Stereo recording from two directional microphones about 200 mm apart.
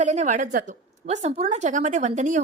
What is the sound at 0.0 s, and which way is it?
A woman's voice, 35° right (ahead or behind).